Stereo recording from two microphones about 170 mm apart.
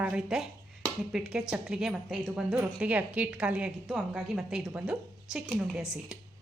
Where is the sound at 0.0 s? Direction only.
5° right (ahead or behind).